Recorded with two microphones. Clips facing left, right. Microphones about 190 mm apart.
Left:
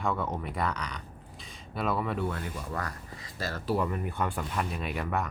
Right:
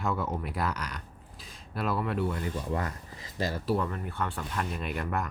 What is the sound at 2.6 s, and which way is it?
Speech, 25° right (ahead or behind).